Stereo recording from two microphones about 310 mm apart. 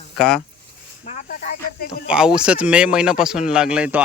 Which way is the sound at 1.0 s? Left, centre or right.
Left.